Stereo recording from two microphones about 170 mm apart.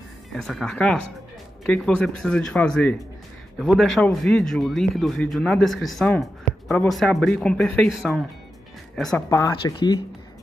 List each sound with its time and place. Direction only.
0.3 s speech: centre (ahead or behind)
9.3 s speech: 20° left (ahead or behind)